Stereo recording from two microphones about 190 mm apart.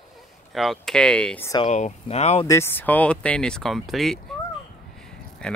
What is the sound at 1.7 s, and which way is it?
Speech, 35° left (ahead or behind).